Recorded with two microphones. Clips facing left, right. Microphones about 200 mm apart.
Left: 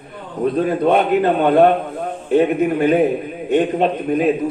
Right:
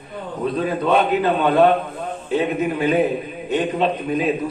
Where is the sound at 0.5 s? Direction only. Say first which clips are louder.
Left 3 dB; 55° left (ahead or behind).